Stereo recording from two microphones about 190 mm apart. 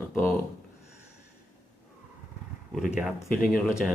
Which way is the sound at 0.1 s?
10° left (ahead or behind).